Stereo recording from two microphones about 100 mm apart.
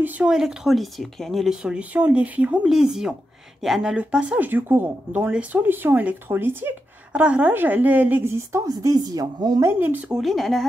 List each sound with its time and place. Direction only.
0.3 s speech: 5° right (ahead or behind)
2.6 s a woman's voice: 5° right (ahead or behind); by 9.6 s 40° right (ahead or behind)
9.6 s a woman's voice: 25° right (ahead or behind)
10.1 s speech: centre (ahead or behind)